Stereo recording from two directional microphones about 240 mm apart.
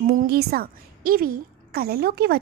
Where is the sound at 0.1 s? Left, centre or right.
Right.